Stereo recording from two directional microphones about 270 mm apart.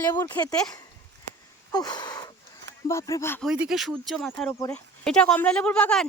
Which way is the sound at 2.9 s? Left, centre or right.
Centre.